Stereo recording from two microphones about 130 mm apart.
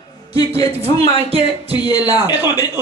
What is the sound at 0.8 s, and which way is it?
Speech, 50° right (ahead or behind).